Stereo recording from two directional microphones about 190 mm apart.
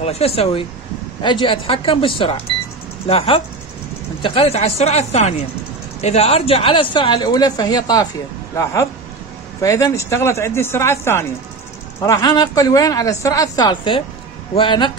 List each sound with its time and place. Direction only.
0.0 s speech: 35° left (ahead or behind)
9.6 s speech: 15° left (ahead or behind)